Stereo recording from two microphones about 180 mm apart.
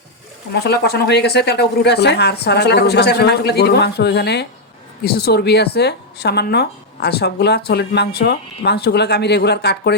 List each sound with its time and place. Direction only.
0.5 s speech: 65° left (ahead or behind)